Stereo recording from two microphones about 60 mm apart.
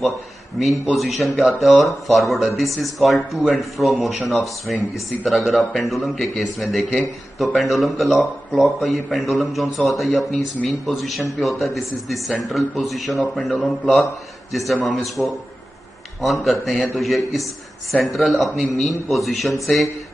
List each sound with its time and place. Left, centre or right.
0.6 s a man's voice: centre